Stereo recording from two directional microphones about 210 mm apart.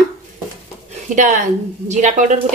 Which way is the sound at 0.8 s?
35° right (ahead or behind).